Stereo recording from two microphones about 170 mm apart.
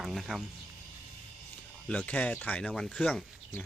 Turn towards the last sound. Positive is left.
turn(degrees=5)  # may be behind; listen again after turning